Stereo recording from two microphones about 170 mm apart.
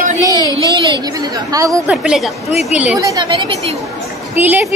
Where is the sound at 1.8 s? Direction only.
Centre (ahead or behind).